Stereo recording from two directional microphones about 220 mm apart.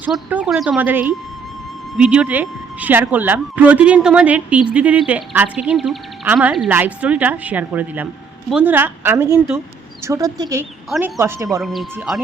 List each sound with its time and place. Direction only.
0.0 s speech: 5° right (ahead or behind)
10.8 s speech: centre (ahead or behind)
11.2 s speech: 15° right (ahead or behind)
11.6 s speech: centre (ahead or behind)